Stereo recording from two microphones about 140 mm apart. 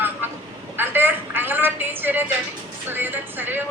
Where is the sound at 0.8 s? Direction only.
15° right (ahead or behind).